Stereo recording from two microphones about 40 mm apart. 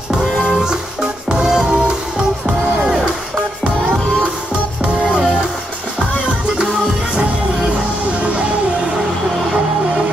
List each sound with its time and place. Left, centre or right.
0.2 s music: centre
5.0 s music: right